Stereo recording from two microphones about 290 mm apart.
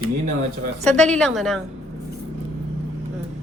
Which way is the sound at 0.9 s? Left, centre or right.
Centre.